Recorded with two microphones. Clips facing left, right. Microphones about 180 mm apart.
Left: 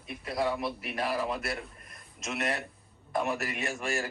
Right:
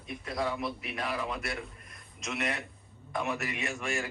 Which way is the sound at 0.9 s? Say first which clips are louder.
Left 5 dB; 35° left (ahead or behind).